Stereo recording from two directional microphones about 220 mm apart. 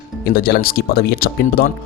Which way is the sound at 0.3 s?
45° left (ahead or behind).